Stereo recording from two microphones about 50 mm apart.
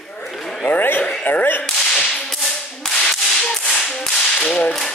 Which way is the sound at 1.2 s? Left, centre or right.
Left.